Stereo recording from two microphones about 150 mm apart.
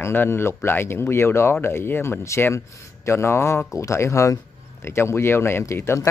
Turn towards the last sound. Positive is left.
turn(degrees=20)  # may be behind; listen again after turning